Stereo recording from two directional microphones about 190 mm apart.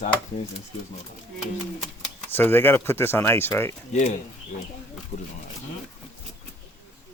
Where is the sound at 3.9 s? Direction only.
35° left (ahead or behind).